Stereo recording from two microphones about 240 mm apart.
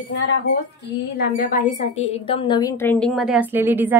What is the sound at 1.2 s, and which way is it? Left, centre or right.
Speech, left.